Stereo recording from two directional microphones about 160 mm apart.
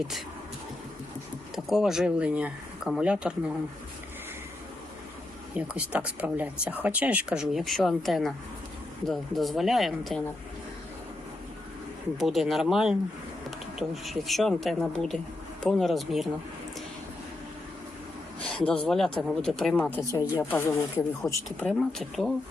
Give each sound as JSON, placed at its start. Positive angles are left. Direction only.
{"t": 1.5, "sound": "speech", "side_deg": 0}
{"t": 5.5, "sound": "speech", "side_deg": -5}
{"t": 12.1, "sound": "speech", "side_deg": 0}
{"t": 18.4, "sound": "a sound", "side_deg": 5}
{"t": 18.9, "sound": "speech", "side_deg": 0}
{"t": 21.7, "sound": "speech", "side_deg": 0}